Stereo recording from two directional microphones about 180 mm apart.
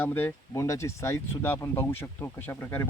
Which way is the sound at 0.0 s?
10° left (ahead or behind).